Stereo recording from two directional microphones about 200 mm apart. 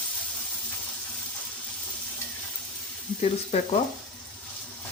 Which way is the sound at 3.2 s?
30° left (ahead or behind).